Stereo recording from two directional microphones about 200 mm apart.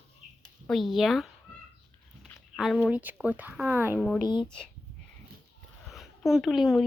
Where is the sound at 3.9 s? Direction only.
5° left (ahead or behind).